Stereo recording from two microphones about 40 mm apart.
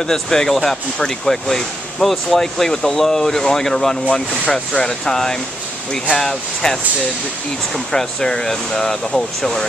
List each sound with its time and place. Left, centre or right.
0.0 s speech: centre
4.1 s speech: left
5.0 s speech: centre